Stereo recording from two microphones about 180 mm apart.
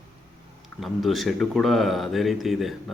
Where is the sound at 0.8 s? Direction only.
Centre (ahead or behind).